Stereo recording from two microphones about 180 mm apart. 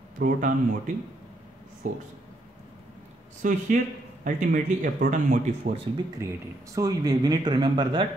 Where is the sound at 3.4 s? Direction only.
45° right (ahead or behind).